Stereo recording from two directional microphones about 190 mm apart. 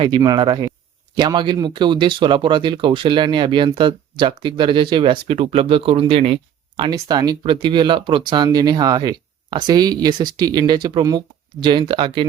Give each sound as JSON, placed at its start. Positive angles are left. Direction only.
{"t": 0.0, "sound": "speech", "side_deg": -25}